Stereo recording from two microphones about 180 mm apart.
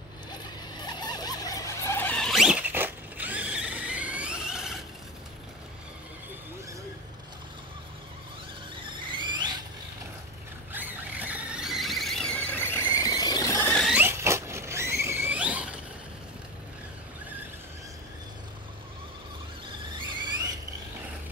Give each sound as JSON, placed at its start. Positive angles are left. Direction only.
{"t": 0.7, "sound": "a sound", "side_deg": 25}
{"t": 9.1, "sound": "squeal", "side_deg": -25}
{"t": 10.7, "sound": "squeal", "side_deg": -10}
{"t": 13.7, "sound": "rodents", "side_deg": 5}
{"t": 13.9, "sound": "rodents", "side_deg": -15}